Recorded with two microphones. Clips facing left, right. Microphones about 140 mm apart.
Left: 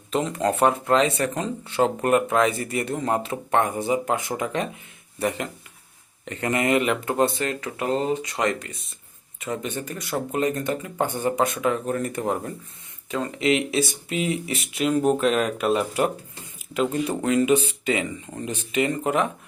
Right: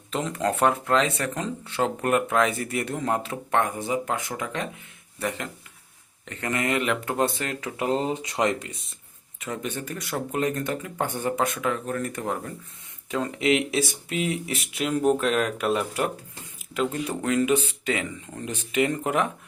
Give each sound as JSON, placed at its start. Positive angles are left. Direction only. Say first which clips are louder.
{"t": 0.1, "sound": "speech", "louder": "left 3 dB", "side_deg": 5}
{"t": 6.2, "sound": "speech", "louder": "left 4 dB", "side_deg": 15}
{"t": 7.8, "sound": "speech", "louder": "left 1 dB", "side_deg": -20}
{"t": 9.7, "sound": "speech", "louder": "left 2 dB", "side_deg": 0}
{"t": 11.0, "sound": "speech", "louder": "left 3 dB", "side_deg": 15}
{"t": 13.1, "sound": "speech", "louder": "left 1 dB", "side_deg": -5}
{"t": 15.1, "sound": "speech", "louder": "left 2 dB", "side_deg": 5}